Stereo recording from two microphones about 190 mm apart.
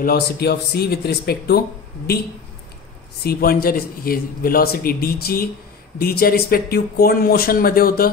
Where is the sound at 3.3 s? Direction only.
55° left (ahead or behind).